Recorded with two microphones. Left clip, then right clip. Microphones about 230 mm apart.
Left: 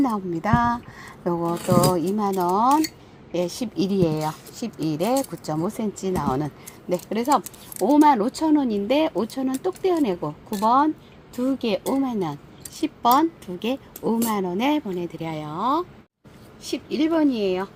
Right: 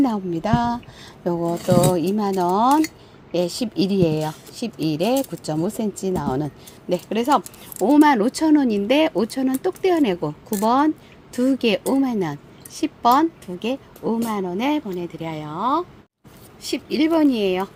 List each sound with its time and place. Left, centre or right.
0.0 s a woman's voice: centre
2.0 s a woman's voice: centre
16.6 s speech: right